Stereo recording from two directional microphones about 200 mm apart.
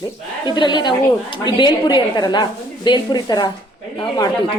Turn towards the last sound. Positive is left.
turn(degrees=20)  # may be behind; listen again after turning